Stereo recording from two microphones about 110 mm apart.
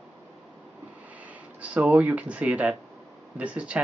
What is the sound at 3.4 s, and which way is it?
Speech, 10° right (ahead or behind).